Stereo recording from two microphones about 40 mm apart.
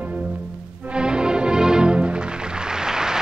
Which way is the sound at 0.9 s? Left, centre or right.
Right.